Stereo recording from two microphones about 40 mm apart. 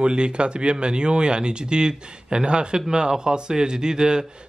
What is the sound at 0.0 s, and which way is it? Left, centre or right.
A man's voice, right.